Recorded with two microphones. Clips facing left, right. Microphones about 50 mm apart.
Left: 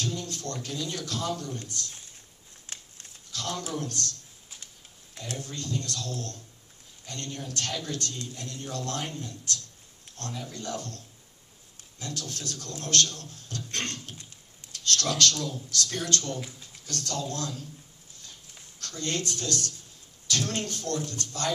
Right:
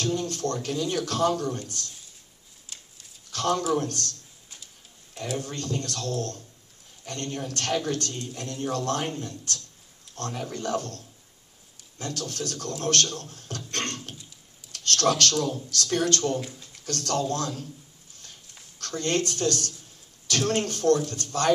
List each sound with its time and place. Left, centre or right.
0.0 s a man's voice: right
2.6 s a sound: left
3.3 s speech: right
5.4 s speech: right
13.7 s a sound: right
14.7 s speech: right
16.3 s speech: centre
16.8 s speech: right
18.8 s speech: right